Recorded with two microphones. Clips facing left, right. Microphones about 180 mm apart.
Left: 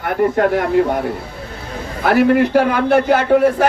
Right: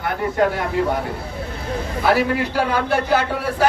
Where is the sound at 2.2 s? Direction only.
55° left (ahead or behind).